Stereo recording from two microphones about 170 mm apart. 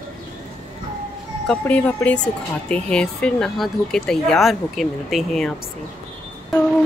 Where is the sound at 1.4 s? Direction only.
10° left (ahead or behind).